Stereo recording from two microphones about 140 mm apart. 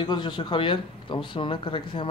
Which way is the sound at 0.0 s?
35° left (ahead or behind).